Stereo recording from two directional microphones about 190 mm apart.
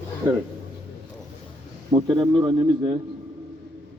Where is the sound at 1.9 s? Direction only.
25° right (ahead or behind).